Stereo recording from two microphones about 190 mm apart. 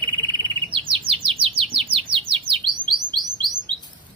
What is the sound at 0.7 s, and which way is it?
Chirp, 25° right (ahead or behind).